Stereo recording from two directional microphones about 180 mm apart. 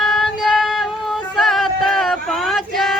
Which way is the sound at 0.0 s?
Centre (ahead or behind).